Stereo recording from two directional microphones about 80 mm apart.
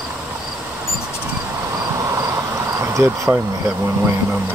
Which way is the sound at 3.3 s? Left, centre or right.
Right.